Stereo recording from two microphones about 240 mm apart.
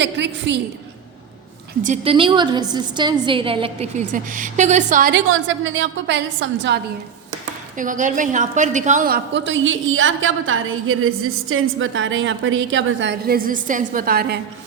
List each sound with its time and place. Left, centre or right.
0.0 s a woman's voice: right
1.8 s a woman's voice: right
5.1 s a woman's voice: right
7.8 s a woman's voice: right